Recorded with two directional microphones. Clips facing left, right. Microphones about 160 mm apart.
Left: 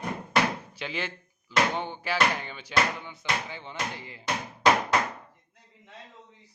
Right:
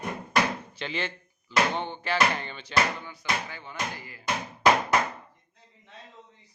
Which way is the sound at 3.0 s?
20° left (ahead or behind).